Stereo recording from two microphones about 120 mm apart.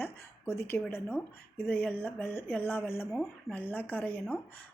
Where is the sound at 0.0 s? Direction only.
20° left (ahead or behind).